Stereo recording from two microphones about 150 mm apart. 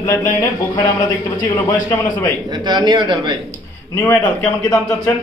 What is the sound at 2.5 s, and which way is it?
Speech, 30° right (ahead or behind).